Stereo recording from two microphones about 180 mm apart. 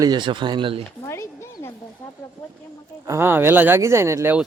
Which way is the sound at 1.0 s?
15° left (ahead or behind).